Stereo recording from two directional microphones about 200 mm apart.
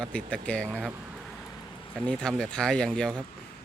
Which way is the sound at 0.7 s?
10° right (ahead or behind).